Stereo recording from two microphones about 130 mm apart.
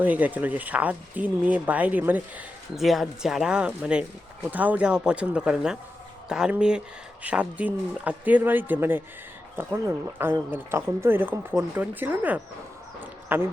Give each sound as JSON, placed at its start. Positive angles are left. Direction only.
{"t": 0.0, "sound": "speech", "side_deg": -10}
{"t": 2.7, "sound": "speech", "side_deg": 0}
{"t": 13.0, "sound": "a sound", "side_deg": -15}